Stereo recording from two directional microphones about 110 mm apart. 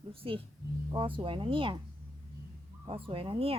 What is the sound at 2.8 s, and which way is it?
Speech, 55° right (ahead or behind).